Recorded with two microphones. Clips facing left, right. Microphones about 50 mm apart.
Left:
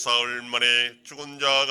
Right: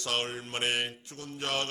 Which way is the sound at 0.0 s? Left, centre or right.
Left.